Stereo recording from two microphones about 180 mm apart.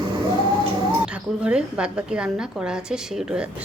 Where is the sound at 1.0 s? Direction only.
5° right (ahead or behind).